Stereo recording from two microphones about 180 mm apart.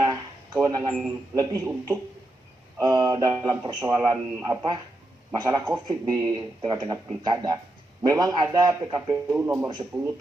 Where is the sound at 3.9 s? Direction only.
15° right (ahead or behind).